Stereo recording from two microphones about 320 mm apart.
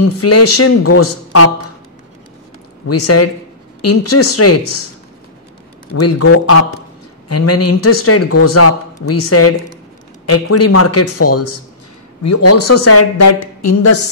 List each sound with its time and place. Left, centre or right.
0.2 s speech: left
2.9 s speech: left
5.9 s speech: left